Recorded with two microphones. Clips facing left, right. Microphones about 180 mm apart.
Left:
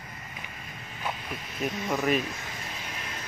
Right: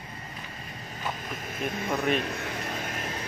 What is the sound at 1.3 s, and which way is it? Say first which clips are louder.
Speech: right 3 dB; 50° right (ahead or behind).